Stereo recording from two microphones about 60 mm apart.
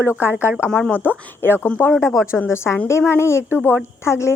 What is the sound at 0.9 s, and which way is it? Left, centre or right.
Speech, left.